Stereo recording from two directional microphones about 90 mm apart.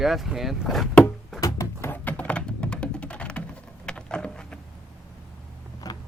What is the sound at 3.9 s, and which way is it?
Vehicle, 10° left (ahead or behind).